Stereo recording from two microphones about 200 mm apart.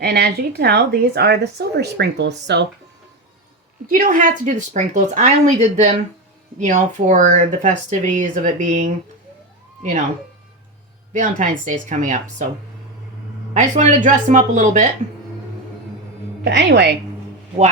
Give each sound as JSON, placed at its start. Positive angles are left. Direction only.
{"t": 0.0, "sound": "a woman's voice", "side_deg": -50}
{"t": 3.8, "sound": "speech", "side_deg": -45}
{"t": 11.1, "sound": "speech", "side_deg": -40}
{"t": 13.5, "sound": "speech", "side_deg": -35}
{"t": 16.4, "sound": "a woman's voice", "side_deg": -60}